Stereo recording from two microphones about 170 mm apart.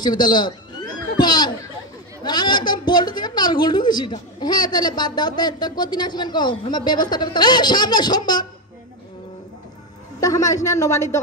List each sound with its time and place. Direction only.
0.0 s a woman's voice: 25° left (ahead or behind)
10.2 s a woman's voice: 20° left (ahead or behind)